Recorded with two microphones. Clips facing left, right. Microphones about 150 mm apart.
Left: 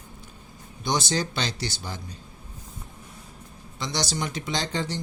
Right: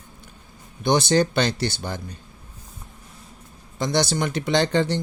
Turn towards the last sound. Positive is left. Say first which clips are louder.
# right 9 dB
turn(degrees=-60)  # may be behind; listen again after turning